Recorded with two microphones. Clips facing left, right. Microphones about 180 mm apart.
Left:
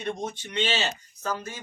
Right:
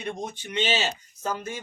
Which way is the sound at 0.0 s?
15° right (ahead or behind).